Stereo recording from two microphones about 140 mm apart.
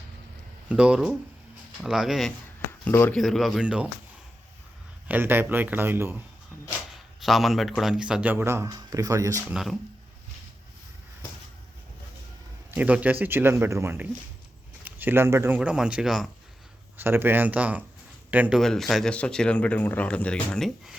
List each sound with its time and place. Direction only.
0.7 s speech: 5° right (ahead or behind)
2.8 s speech: 15° left (ahead or behind)
3.2 s speech: centre (ahead or behind)
5.0 s speech: 15° right (ahead or behind)
6.7 s a sound: centre (ahead or behind)
7.8 s speech: 5° right (ahead or behind); by 9.4 s 25° right (ahead or behind)
9.5 s speech: centre (ahead or behind)
12.7 s speech: 10° right (ahead or behind)
17.0 s speech: 15° right (ahead or behind)
18.6 s speech: centre (ahead or behind)